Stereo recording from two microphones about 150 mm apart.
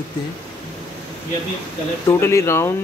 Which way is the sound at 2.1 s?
20° left (ahead or behind).